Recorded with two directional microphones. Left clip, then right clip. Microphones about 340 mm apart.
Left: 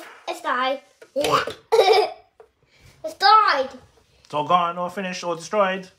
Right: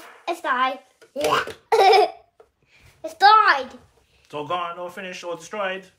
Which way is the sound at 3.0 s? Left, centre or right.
Right.